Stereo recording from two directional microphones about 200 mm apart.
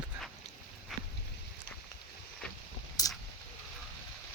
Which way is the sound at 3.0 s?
20° left (ahead or behind).